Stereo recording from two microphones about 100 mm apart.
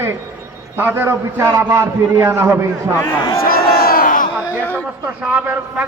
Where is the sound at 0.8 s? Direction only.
20° right (ahead or behind).